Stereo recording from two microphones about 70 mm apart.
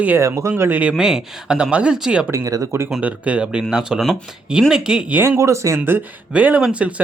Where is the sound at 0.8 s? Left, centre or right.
Centre.